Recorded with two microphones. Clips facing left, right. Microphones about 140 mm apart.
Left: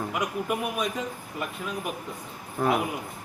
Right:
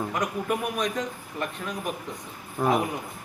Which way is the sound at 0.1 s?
10° left (ahead or behind).